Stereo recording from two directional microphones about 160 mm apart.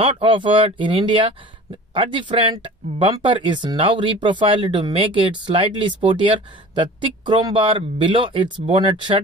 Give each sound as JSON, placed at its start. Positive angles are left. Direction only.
{"t": 0.0, "sound": "speech", "side_deg": -35}